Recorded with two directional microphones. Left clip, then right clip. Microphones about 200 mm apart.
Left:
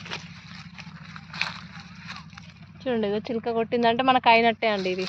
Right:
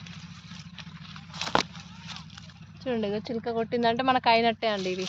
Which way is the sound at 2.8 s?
40° left (ahead or behind).